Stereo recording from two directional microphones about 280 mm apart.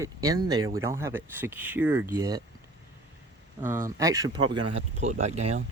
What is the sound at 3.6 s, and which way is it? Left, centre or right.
Speech, centre.